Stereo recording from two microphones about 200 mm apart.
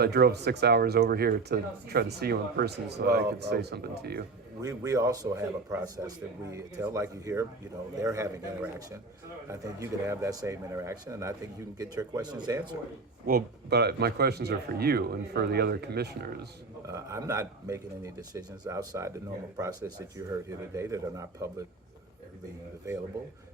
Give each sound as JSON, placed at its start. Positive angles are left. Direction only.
{"t": 0.0, "sound": "speech", "side_deg": -50}
{"t": 4.6, "sound": "speech", "side_deg": -15}
{"t": 13.2, "sound": "speech", "side_deg": -50}
{"t": 16.9, "sound": "speech", "side_deg": -15}
{"t": 20.1, "sound": "speech", "side_deg": -15}